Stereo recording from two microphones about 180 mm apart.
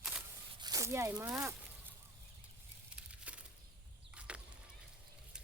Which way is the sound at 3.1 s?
5° right (ahead or behind).